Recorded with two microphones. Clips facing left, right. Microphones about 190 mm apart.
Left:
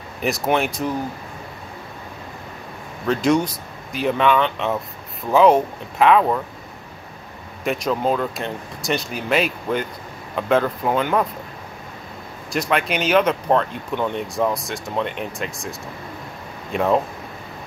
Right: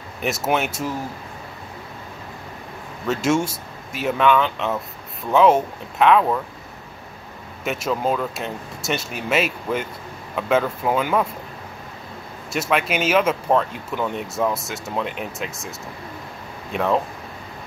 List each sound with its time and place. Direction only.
0.2 s speech: centre (ahead or behind)
3.1 s speech: 5° right (ahead or behind)
7.6 s speech: centre (ahead or behind)
12.5 s speech: centre (ahead or behind)
16.7 s speech: 5° left (ahead or behind)